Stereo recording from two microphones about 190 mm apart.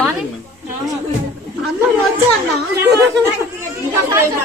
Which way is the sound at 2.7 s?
10° right (ahead or behind).